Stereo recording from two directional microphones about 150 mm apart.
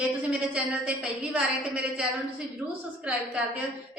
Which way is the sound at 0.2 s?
10° right (ahead or behind).